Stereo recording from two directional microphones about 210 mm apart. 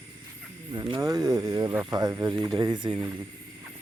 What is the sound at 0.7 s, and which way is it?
Speech, 20° right (ahead or behind).